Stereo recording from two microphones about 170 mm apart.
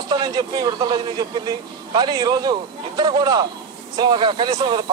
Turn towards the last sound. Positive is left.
turn(degrees=-25)  # may be behind; listen again after turning